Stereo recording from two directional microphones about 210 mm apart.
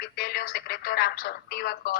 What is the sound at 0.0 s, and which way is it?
Speech, 45° left (ahead or behind).